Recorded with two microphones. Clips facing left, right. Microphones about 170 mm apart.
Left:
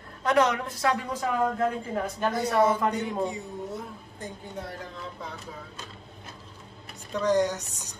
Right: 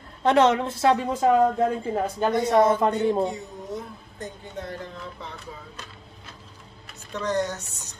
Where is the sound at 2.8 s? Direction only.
35° right (ahead or behind).